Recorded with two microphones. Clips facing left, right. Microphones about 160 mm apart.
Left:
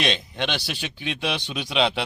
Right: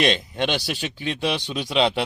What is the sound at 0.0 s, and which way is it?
Speech, 50° right (ahead or behind).